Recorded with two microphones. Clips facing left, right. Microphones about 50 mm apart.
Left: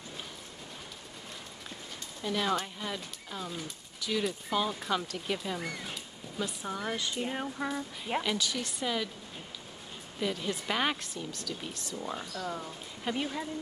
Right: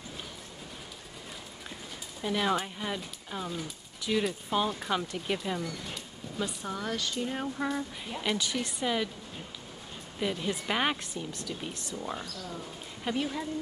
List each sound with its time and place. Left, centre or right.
2.2 s speech: centre
3.4 s speech: centre
4.3 s speech: centre
6.9 s speech: centre
7.3 s speech: centre
10.1 s speech: centre
12.0 s speech: centre